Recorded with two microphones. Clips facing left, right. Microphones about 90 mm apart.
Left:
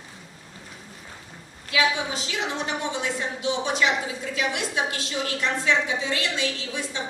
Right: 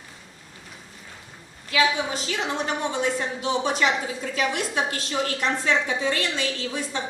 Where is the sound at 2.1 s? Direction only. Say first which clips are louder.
Right 2 dB; 45° right (ahead or behind).